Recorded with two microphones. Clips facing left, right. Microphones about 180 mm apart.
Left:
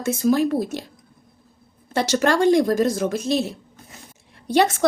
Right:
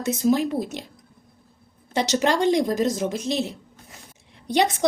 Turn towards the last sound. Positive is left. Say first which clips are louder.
# left 3 dB
turn(degrees=-20)  # may be behind; listen again after turning